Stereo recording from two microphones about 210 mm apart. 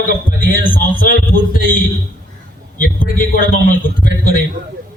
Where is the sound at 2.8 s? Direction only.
40° left (ahead or behind).